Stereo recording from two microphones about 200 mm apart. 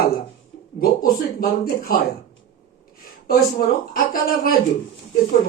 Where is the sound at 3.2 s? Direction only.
45° left (ahead or behind).